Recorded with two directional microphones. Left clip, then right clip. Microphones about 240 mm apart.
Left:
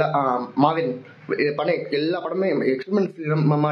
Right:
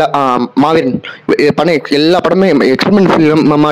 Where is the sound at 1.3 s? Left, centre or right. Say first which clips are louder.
Right 12 dB; right.